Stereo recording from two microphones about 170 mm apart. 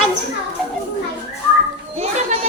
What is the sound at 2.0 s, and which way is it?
Children playing, 40° right (ahead or behind).